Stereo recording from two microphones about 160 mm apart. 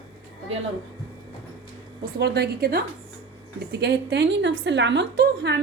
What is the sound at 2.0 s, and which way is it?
A woman's voice, 90° right.